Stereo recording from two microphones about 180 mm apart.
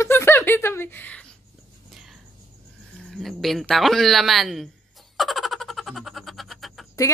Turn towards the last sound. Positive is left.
turn(degrees=0)  # may be behind; listen again after turning